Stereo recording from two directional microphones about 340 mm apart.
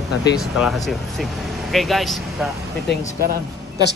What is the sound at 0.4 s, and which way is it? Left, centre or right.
Speech, centre.